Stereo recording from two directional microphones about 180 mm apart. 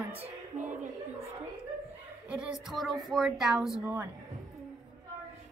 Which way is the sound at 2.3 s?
5° right (ahead or behind).